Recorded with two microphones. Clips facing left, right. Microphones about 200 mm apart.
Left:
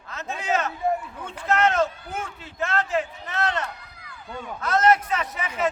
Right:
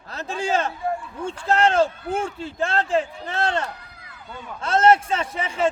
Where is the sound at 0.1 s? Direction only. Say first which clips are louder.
Right 2 dB; 30° right (ahead or behind).